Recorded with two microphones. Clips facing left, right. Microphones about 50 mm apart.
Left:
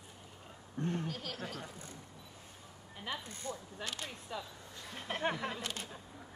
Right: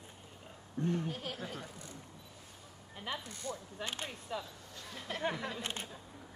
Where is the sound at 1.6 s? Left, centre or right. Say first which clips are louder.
Even; left.